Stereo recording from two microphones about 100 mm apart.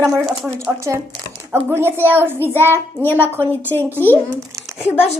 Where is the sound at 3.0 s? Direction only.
20° left (ahead or behind).